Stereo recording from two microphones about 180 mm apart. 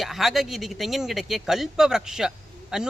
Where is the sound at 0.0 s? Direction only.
Centre (ahead or behind).